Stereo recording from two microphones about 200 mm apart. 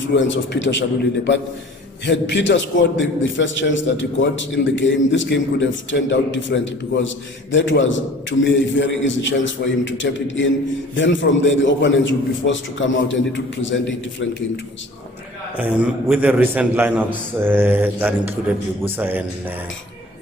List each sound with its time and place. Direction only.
0.1 s a man's voice: 65° left (ahead or behind)
15.5 s a man's voice: 10° right (ahead or behind)